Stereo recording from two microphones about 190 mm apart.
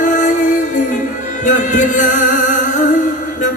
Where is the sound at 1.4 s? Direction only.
45° left (ahead or behind).